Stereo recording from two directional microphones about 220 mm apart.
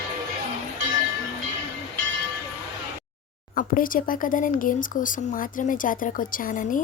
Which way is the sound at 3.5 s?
40° left (ahead or behind).